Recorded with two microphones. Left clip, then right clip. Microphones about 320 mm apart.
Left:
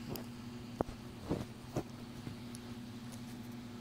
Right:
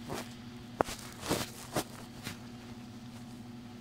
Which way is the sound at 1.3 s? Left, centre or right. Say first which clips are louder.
Right 7 dB; right.